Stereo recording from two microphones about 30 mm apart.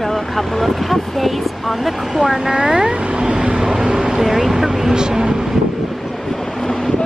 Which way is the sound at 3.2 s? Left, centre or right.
Right.